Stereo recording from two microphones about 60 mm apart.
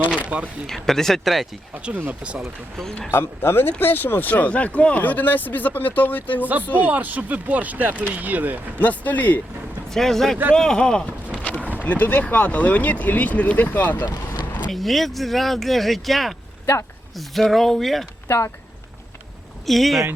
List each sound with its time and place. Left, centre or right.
0.3 s speech: right
0.7 s speech: centre
2.0 s speech: right
3.1 s speech: left
6.8 s speech: right
8.8 s speech: left
9.9 s speech: centre
11.5 s boat: right
11.8 s speech: left
14.7 s speech: centre
18.3 s speech: left
19.6 s speech: centre